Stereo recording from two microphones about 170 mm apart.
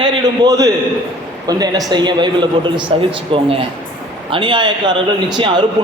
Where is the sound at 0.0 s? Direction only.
20° right (ahead or behind).